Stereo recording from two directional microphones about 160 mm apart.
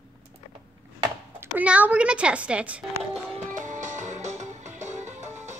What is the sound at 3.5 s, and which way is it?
Music, 50° right (ahead or behind).